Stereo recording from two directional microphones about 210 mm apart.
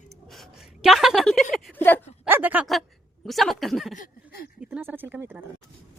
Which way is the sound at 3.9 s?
40° left (ahead or behind).